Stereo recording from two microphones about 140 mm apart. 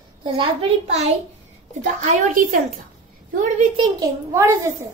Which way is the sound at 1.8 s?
70° right (ahead or behind).